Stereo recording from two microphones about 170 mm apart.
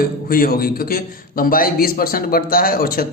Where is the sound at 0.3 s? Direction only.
60° left (ahead or behind).